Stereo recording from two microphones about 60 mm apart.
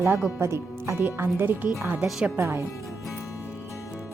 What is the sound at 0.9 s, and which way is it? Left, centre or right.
Speech, right.